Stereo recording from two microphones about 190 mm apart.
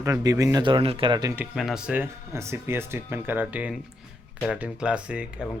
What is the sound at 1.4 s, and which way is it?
Speech, centre (ahead or behind).